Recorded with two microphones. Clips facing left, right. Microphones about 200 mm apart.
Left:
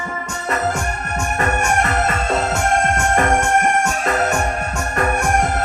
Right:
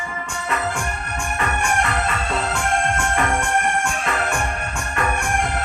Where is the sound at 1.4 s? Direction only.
45° left (ahead or behind).